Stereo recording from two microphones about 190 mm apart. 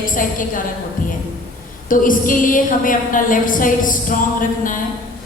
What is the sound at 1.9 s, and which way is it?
A woman's voice, 45° left (ahead or behind).